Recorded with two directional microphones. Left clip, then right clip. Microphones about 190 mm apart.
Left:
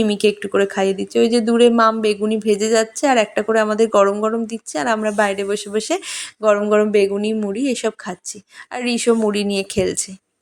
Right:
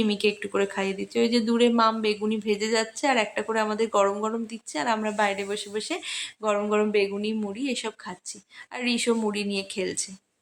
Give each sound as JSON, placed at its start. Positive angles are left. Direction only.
{"t": 0.0, "sound": "speech", "side_deg": 30}